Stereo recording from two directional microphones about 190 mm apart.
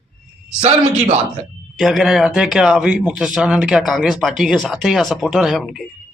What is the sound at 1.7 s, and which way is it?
Speech, centre (ahead or behind).